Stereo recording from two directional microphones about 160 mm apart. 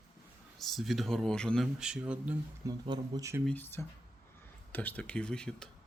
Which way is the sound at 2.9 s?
20° right (ahead or behind).